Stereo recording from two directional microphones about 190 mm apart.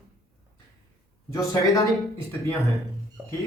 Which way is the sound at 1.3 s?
15° left (ahead or behind).